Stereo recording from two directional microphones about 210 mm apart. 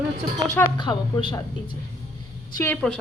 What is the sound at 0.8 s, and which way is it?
Speech, 20° left (ahead or behind).